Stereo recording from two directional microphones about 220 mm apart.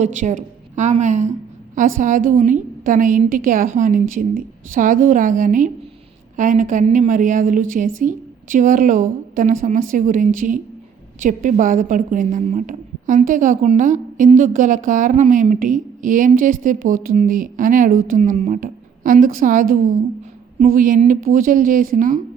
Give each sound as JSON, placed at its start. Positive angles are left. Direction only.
{"t": 0.0, "sound": "a woman's voice", "side_deg": -35}